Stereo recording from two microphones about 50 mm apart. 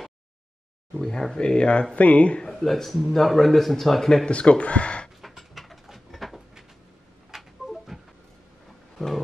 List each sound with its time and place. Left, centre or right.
0.9 s speech: centre
2.6 s speech: centre
4.3 s speech: left
5.2 s a sound: centre